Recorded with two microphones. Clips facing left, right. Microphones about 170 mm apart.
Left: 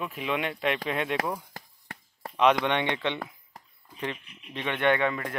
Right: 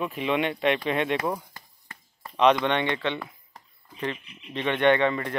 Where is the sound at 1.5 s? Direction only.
85° left.